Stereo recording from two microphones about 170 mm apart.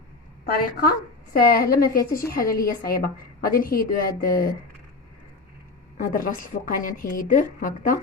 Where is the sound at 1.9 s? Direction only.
60° left (ahead or behind).